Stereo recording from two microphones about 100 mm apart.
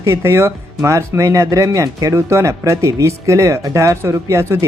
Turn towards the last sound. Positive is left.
turn(degrees=-30)  # may be behind; listen again after turning